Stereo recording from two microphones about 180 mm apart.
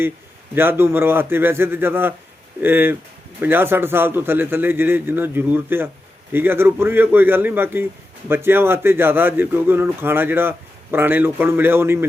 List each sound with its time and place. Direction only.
0.5 s a man's voice: 10° right (ahead or behind)